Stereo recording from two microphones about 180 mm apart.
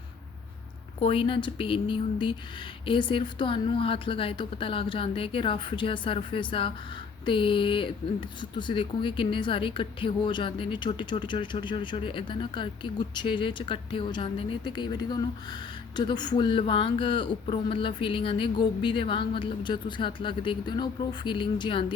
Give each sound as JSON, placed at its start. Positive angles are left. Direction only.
{"t": 0.9, "sound": "speech", "side_deg": 30}